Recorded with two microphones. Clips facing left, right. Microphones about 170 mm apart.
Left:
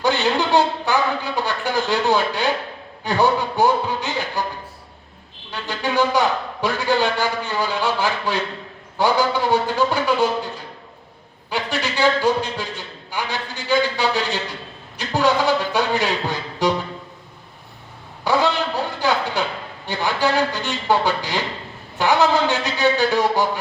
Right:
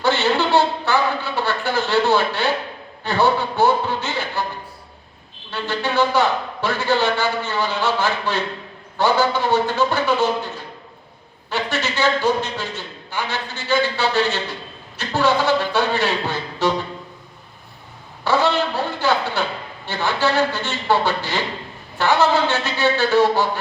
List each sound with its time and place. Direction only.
0.0 s a man's voice: 15° left (ahead or behind)
3.0 s a sound: 15° left (ahead or behind)
5.5 s a man's voice: 15° left (ahead or behind)
11.5 s a man's voice: 10° left (ahead or behind)
18.3 s a man's voice: 15° left (ahead or behind)